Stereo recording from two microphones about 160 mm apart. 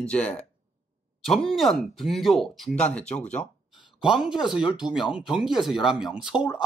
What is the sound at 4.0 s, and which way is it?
Speech, 5° right (ahead or behind).